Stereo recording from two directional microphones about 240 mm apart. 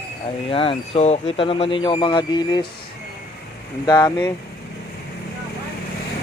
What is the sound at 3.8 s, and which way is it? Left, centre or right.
Speech, centre.